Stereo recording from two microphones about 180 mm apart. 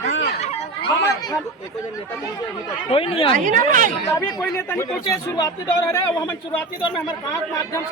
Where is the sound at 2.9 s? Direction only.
30° left (ahead or behind).